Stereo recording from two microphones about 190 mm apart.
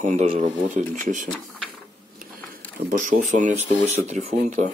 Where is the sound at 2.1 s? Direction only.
45° right (ahead or behind).